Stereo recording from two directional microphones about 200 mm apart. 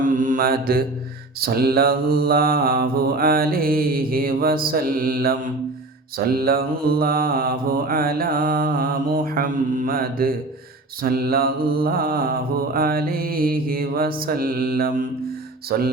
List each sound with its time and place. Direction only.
0.0 s mantra: 40° right (ahead or behind)